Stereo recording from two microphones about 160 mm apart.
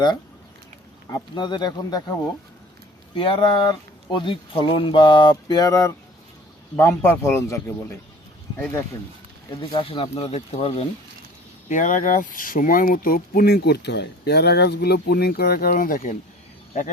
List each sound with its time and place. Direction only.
1.1 s speech: 30° left (ahead or behind)
3.2 s speech: 30° left (ahead or behind); by 8.8 s 15° left (ahead or behind)
9.6 s speech: 35° left (ahead or behind)
11.7 s speech: 55° left (ahead or behind)